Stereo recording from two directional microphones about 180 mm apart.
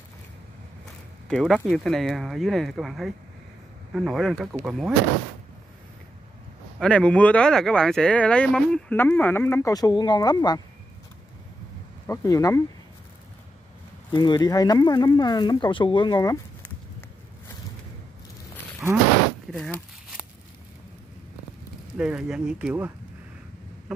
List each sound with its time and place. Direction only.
1.3 s speech: centre (ahead or behind)
6.8 s speech: 5° left (ahead or behind); by 10.6 s 20° left (ahead or behind)
12.1 s speech: 15° left (ahead or behind)
14.1 s speech: 25° left (ahead or behind)
18.8 s a sound: centre (ahead or behind)
21.9 s speech: 5° right (ahead or behind)